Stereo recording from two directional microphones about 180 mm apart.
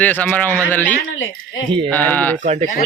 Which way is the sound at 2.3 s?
40° right (ahead or behind).